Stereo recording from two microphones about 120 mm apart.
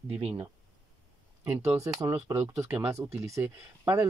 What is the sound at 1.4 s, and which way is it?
Speech, 20° right (ahead or behind).